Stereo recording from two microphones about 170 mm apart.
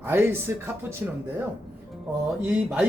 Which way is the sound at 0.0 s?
15° right (ahead or behind).